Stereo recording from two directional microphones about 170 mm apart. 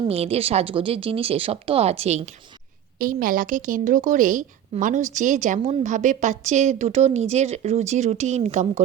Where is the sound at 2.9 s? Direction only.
55° right (ahead or behind).